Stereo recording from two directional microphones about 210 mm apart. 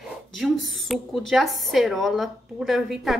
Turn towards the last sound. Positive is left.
turn(degrees=0)  # may be behind; listen again after turning